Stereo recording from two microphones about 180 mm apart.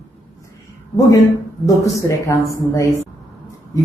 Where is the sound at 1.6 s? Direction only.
15° left (ahead or behind).